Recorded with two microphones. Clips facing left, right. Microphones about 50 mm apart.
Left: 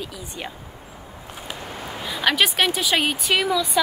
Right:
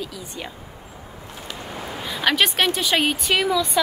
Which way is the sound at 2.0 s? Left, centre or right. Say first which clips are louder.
Even; centre.